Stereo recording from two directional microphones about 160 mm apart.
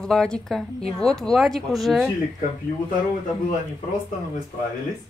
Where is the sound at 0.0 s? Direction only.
5° left (ahead or behind).